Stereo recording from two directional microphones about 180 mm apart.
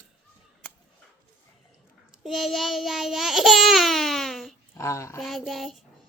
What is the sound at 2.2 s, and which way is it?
Babbling, centre (ahead or behind).